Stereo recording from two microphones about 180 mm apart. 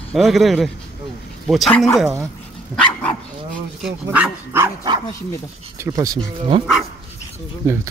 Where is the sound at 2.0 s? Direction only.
15° right (ahead or behind).